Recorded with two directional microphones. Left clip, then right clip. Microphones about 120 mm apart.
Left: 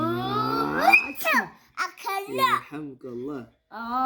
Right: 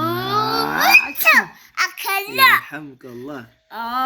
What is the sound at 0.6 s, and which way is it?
Cat, 10° right (ahead or behind).